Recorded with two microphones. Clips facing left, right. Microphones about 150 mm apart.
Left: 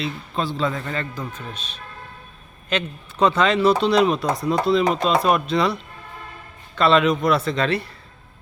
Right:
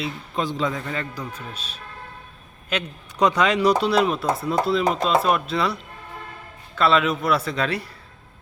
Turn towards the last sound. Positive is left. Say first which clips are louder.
# left 3 dB
turn(degrees=-10)  # may be behind; listen again after turning